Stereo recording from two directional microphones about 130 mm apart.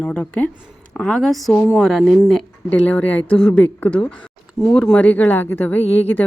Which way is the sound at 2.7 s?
10° left (ahead or behind).